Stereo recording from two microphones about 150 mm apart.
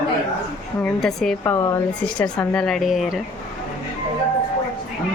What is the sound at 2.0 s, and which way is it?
Speech, 5° left (ahead or behind).